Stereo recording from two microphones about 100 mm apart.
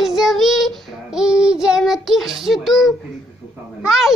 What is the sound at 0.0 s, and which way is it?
Child singing, 5° right (ahead or behind).